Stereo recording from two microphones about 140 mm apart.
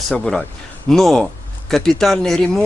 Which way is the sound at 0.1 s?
5° left (ahead or behind).